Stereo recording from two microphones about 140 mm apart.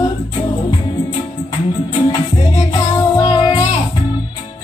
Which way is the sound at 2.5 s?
30° left (ahead or behind).